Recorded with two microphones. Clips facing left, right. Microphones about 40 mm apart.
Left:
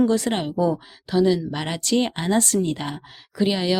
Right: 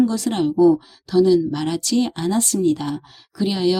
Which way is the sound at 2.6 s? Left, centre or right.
Left.